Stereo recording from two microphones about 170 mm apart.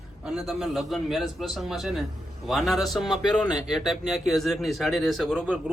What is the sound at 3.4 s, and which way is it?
Speech, 25° left (ahead or behind).